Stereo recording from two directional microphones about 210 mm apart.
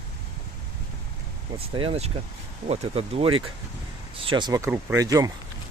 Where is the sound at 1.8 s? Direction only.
30° right (ahead or behind).